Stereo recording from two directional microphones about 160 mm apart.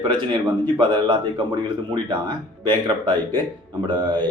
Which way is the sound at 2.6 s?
30° right (ahead or behind).